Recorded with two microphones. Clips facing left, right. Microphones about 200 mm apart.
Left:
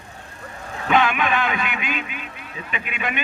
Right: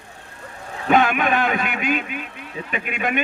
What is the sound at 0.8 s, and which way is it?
Vehicle, 45° right (ahead or behind).